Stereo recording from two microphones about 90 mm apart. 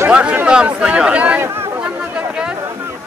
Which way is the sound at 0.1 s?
15° right (ahead or behind).